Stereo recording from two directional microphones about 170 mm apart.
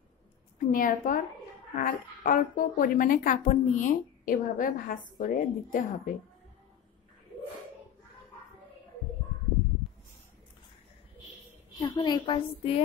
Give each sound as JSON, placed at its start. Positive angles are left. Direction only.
{"t": 0.6, "sound": "a woman's voice", "side_deg": 55}
{"t": 11.8, "sound": "a woman's voice", "side_deg": 25}